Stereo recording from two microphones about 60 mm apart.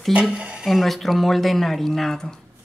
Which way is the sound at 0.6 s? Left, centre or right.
Centre.